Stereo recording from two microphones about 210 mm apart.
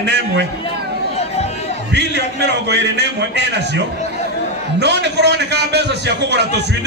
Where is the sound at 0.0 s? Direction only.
55° right (ahead or behind).